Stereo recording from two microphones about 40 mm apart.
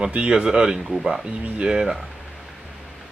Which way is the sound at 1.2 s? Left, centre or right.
Centre.